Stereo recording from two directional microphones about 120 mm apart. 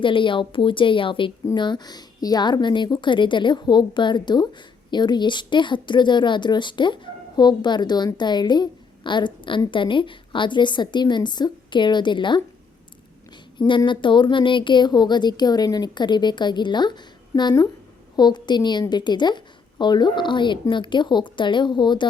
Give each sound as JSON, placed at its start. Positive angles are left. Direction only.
{"t": 0.0, "sound": "a woman's voice", "side_deg": 45}
{"t": 13.6, "sound": "a woman's voice", "side_deg": 40}